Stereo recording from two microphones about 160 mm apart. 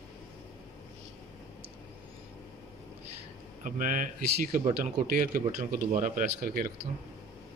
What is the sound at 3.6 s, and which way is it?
Speech, 55° right (ahead or behind).